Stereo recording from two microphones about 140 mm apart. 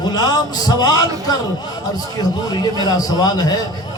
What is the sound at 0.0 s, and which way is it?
A man's voice, 30° left (ahead or behind).